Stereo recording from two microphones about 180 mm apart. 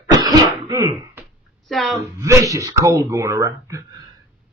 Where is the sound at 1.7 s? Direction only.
Centre (ahead or behind).